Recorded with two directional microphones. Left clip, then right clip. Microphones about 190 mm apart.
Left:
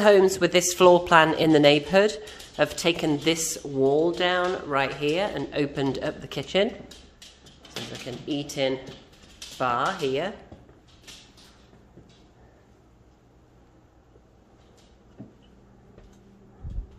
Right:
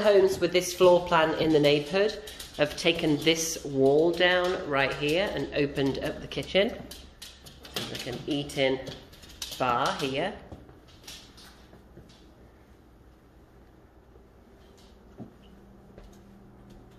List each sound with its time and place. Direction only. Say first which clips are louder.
0.0 s speech: left 4 dB; 45° left (ahead or behind)
2.5 s speech: left 2 dB; 30° left (ahead or behind)
8.0 s speech: left 3 dB; 20° left (ahead or behind)